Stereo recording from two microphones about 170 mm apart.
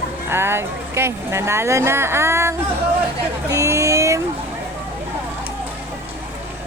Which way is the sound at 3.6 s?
20° right (ahead or behind).